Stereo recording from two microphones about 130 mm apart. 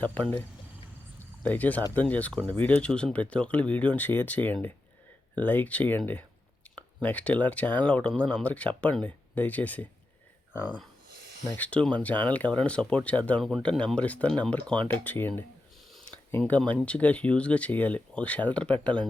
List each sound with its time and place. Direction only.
0.0 s speech: 15° left (ahead or behind)
11.5 s speech: 10° left (ahead or behind)
15.9 s a sound: 5° left (ahead or behind)
16.8 s speech: 10° left (ahead or behind)